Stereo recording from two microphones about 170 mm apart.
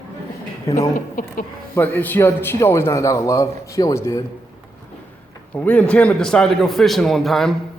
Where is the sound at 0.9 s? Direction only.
55° left (ahead or behind).